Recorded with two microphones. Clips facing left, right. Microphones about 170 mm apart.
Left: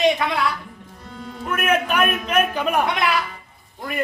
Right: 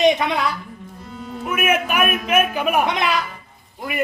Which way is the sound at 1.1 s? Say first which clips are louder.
Right 1 dB; 5° right (ahead or behind).